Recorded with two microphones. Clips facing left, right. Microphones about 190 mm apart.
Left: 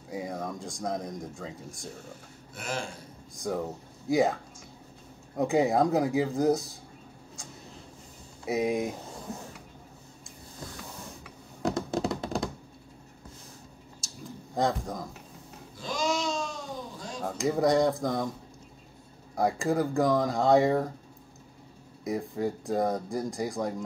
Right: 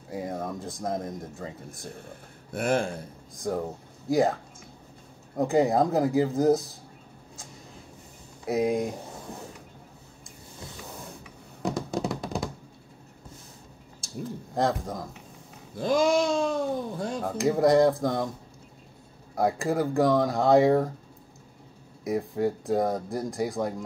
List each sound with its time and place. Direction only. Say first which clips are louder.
0.1 s speech: right 2 dB; centre (ahead or behind)
2.0 s speech: right 1 dB; 55° right (ahead or behind)
3.3 s speech: right 2 dB; centre (ahead or behind)
8.5 s speech: right 2 dB; centre (ahead or behind)
11.6 s hands: even; centre (ahead or behind)
14.0 s a sound: right 7 dB; 55° right (ahead or behind)
14.5 s speech: right 1 dB; centre (ahead or behind)
15.7 s a sound: right 8 dB; 55° right (ahead or behind)
17.2 s speech: right 3 dB; centre (ahead or behind)
19.3 s speech: right 1 dB; centre (ahead or behind)
22.0 s speech: right 3 dB; centre (ahead or behind)